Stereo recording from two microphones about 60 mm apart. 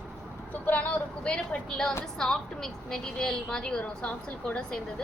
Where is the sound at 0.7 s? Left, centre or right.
Left.